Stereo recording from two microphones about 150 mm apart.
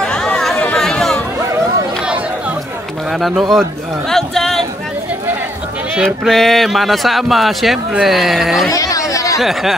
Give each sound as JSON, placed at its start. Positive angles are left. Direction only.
{"t": 0.0, "sound": "chatter", "side_deg": 5}
{"t": 3.1, "sound": "speech", "side_deg": 0}
{"t": 4.1, "sound": "a sound", "side_deg": 0}
{"t": 5.9, "sound": "speech", "side_deg": 0}
{"t": 8.7, "sound": "chatter", "side_deg": 20}
{"t": 9.4, "sound": "speech", "side_deg": 0}